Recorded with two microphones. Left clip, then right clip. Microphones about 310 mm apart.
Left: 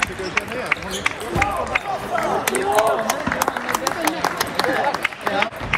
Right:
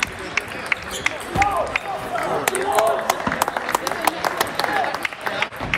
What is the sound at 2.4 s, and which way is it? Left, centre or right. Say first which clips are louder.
Run: even; right.